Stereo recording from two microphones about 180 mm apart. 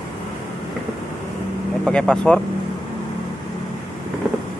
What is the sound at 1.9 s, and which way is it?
Speech, 5° left (ahead or behind).